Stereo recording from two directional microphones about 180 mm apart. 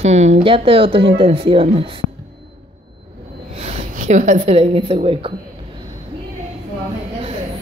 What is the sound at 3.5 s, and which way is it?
A woman's voice, 35° right (ahead or behind).